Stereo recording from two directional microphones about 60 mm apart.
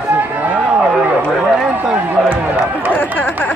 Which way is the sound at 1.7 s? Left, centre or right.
Right.